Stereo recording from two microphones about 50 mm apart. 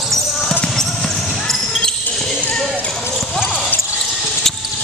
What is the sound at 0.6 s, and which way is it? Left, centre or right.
Basketball bounce, centre.